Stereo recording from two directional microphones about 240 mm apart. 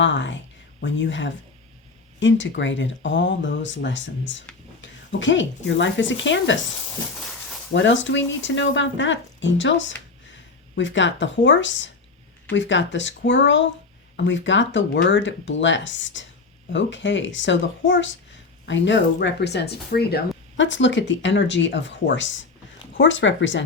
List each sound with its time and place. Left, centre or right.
0.0 s speech: left
7.7 s speech: left